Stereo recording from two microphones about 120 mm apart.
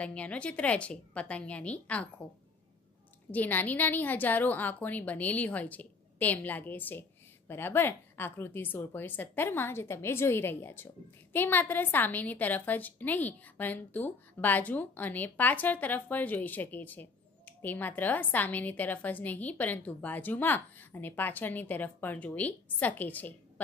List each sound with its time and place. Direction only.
0.0 s a woman's voice: 10° left (ahead or behind)
3.3 s a woman's voice: 15° left (ahead or behind)